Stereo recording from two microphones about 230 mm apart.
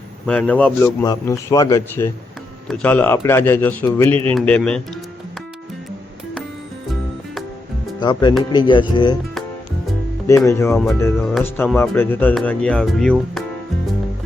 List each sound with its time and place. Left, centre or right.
0.3 s speech: centre
7.9 s speech: centre
10.4 s speech: centre